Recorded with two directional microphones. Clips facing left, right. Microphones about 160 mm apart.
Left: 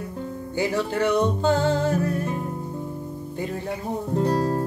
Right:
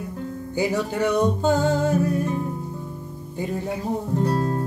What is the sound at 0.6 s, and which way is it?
Music, 15° right (ahead or behind).